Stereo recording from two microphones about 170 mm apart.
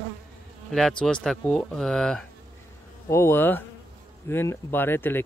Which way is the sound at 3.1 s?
15° left (ahead or behind).